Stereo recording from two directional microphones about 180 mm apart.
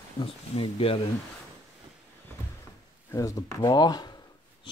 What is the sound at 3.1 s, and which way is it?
Speech, 20° left (ahead or behind).